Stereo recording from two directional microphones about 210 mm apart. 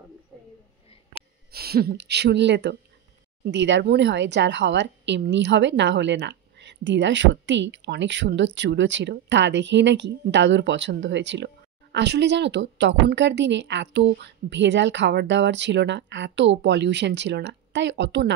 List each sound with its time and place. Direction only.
1.5 s speech: 45° right (ahead or behind)